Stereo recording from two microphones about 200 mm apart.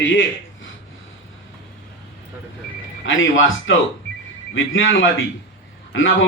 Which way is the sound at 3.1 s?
75° left (ahead or behind).